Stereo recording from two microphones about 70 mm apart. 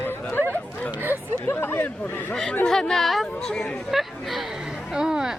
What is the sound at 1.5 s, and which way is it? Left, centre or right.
Speech, left.